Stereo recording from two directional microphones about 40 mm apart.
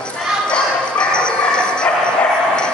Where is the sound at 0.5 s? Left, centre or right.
Left.